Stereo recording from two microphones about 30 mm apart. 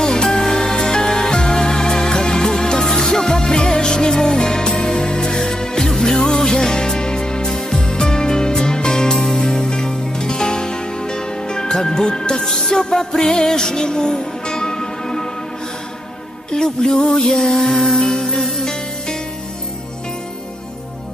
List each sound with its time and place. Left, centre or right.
0.0 s music: left
16.4 s music: left